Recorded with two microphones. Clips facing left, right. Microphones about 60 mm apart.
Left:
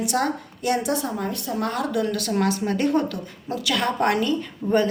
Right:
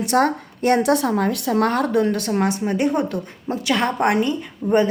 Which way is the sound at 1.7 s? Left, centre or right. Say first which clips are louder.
Right 5 dB; right.